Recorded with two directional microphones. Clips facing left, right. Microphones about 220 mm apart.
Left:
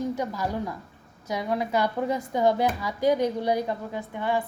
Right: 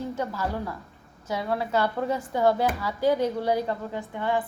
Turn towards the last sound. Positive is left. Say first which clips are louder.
# even
turn(degrees=15)  # may be behind; listen again after turning